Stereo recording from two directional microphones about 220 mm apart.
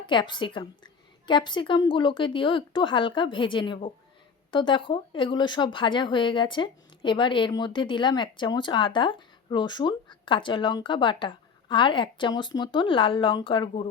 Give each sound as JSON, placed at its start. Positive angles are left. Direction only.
{"t": 0.0, "sound": "a woman's voice", "side_deg": 20}